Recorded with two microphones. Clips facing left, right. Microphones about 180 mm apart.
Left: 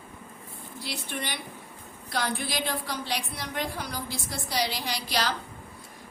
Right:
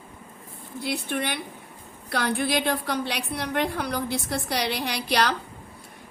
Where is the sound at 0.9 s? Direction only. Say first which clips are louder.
Right 7 dB; 55° right (ahead or behind).